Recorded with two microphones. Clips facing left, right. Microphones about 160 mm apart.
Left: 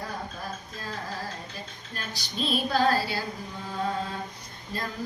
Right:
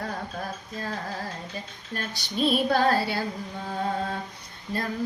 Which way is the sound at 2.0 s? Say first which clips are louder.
Right 5 dB; 60° right (ahead or behind).